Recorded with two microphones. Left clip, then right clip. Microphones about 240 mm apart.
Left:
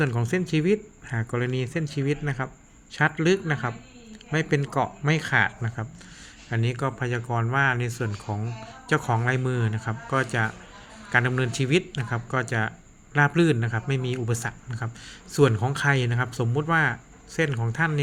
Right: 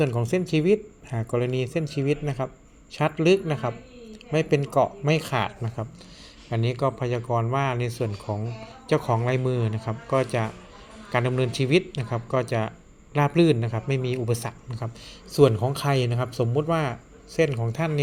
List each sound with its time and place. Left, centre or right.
0.0 s speech: centre